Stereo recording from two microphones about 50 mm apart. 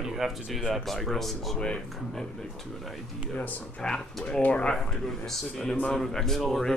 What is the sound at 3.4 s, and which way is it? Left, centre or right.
Speech, left.